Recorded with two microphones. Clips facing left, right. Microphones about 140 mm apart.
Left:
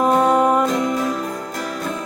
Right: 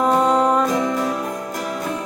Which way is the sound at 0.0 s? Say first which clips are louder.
Left 1 dB; 10° left (ahead or behind).